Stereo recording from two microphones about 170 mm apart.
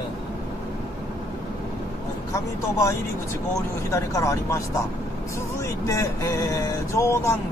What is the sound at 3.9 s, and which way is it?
Speech, 20° left (ahead or behind).